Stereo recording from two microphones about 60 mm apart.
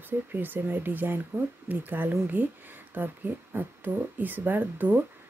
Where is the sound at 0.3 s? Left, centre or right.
Right.